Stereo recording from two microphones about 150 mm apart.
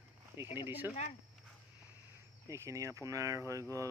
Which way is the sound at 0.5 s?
15° right (ahead or behind).